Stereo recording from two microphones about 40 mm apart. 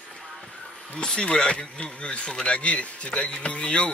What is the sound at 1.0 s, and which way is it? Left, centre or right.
Speech, left.